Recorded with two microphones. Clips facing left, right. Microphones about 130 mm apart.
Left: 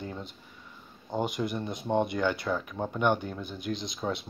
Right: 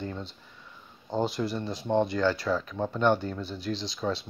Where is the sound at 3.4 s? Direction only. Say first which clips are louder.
Right 1 dB; 30° right (ahead or behind).